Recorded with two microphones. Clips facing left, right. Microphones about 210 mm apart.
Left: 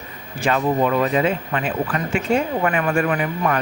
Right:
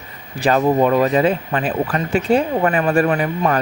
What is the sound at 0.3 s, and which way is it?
Speech, 35° right (ahead or behind).